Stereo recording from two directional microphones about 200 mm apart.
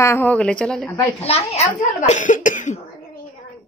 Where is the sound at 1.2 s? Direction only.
30° left (ahead or behind).